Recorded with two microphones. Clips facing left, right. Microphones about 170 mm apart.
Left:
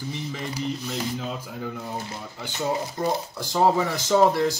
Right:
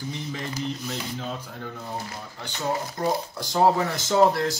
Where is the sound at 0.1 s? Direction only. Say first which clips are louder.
Left 1 dB; 5° left (ahead or behind).